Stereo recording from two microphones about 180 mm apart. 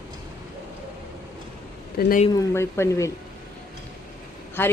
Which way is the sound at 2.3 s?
15° left (ahead or behind).